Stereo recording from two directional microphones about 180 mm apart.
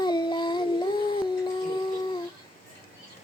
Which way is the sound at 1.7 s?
25° left (ahead or behind).